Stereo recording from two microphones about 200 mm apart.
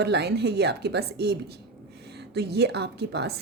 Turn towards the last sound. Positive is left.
turn(degrees=-55)  # may be behind; listen again after turning